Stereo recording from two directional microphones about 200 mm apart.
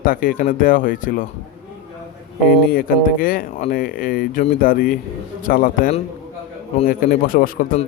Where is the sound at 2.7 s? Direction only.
45° left (ahead or behind).